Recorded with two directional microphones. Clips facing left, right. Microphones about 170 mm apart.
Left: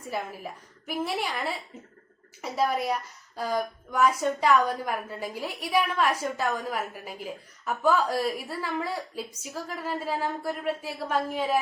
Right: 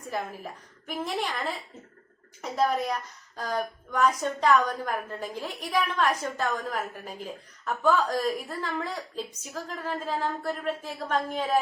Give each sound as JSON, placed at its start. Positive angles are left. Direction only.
{"t": 0.1, "sound": "a woman's voice", "side_deg": 10}